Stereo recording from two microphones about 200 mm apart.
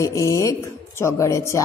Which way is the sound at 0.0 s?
15° left (ahead or behind).